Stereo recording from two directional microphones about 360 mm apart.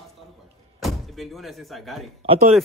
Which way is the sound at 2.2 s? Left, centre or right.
Centre.